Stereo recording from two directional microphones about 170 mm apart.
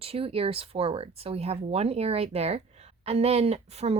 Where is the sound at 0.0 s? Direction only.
35° right (ahead or behind).